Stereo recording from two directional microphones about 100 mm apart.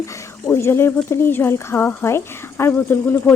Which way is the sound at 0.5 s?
25° left (ahead or behind).